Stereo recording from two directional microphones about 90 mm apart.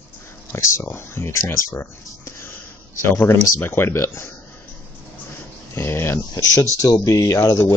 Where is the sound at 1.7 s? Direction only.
30° left (ahead or behind).